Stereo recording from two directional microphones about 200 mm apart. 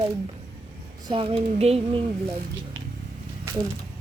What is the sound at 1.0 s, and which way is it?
Speech, 25° right (ahead or behind).